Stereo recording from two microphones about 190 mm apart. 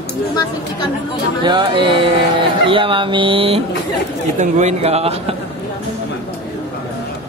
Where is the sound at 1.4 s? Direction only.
25° right (ahead or behind).